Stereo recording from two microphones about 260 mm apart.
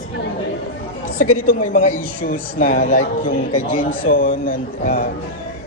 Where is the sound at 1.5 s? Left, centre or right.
Left.